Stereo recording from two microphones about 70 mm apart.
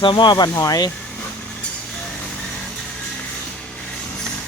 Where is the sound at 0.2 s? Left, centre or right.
Left.